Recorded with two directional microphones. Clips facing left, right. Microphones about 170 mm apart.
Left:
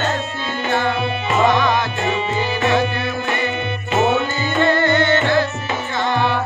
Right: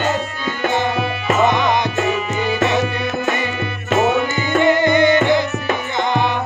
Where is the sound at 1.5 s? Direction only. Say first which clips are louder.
Even; 20° right (ahead or behind).